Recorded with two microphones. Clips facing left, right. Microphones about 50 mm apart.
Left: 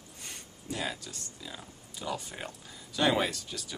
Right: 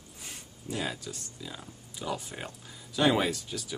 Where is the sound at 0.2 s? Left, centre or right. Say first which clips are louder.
Right 1 dB; centre.